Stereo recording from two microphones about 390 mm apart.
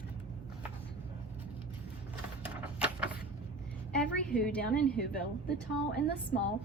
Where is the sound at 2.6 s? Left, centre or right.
Centre.